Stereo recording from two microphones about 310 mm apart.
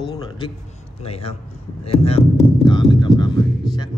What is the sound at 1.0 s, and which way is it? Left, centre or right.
Mantra, centre.